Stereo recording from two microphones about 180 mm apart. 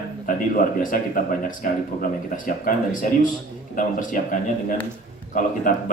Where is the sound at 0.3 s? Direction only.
50° left (ahead or behind).